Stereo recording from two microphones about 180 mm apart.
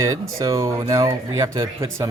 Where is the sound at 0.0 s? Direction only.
20° right (ahead or behind).